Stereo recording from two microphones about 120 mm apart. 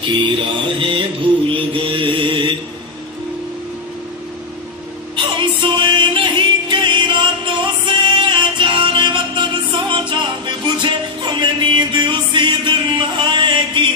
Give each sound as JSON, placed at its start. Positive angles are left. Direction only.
{"t": 0.0, "sound": "music", "side_deg": -40}
{"t": 1.5, "sound": "mantra", "side_deg": -45}
{"t": 5.1, "sound": "music", "side_deg": -45}